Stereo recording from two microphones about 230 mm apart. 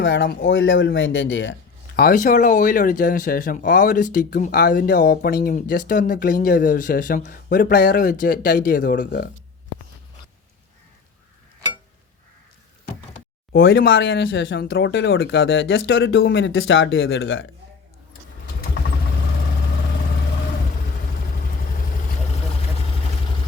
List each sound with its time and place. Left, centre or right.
0.0 s speech: left
2.0 s speech: left
13.6 s speech: left